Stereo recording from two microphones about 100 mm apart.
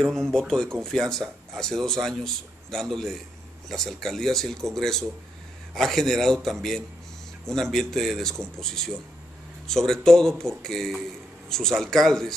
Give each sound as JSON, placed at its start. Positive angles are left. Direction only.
{"t": 0.0, "sound": "speech", "side_deg": 5}